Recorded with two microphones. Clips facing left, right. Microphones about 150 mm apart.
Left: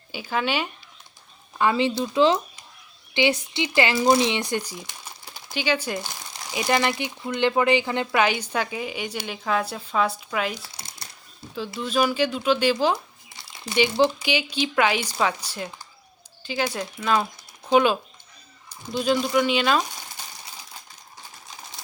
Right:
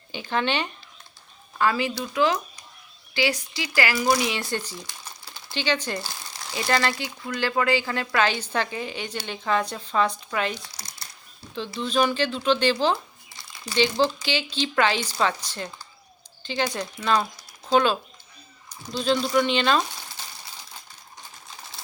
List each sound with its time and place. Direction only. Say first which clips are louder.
0.1 s speech: even; 5° left (ahead or behind)
1.5 s speech: left 2 dB; 20° left (ahead or behind)
10.6 s speech: left 1 dB; 25° left (ahead or behind)
11.5 s speech: even; 5° left (ahead or behind)
17.7 s speech: left 2 dB; 15° left (ahead or behind)